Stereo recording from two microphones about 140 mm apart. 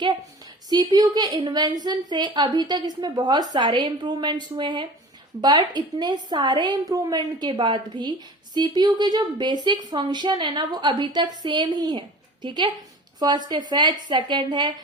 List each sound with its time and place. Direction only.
0.7 s a woman's voice: 30° right (ahead or behind)